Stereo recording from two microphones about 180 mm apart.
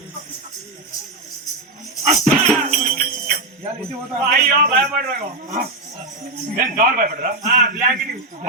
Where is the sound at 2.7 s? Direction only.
50° right (ahead or behind).